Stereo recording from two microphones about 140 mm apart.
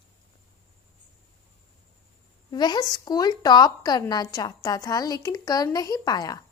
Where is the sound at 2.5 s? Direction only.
30° left (ahead or behind).